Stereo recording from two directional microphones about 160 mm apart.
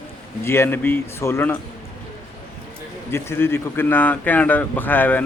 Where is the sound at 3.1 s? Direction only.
15° left (ahead or behind).